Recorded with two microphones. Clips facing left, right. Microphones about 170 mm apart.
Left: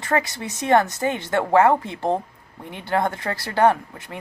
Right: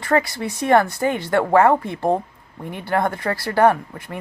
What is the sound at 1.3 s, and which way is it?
Speech, 50° right (ahead or behind).